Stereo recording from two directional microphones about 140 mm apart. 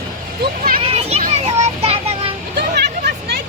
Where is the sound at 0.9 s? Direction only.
50° right (ahead or behind).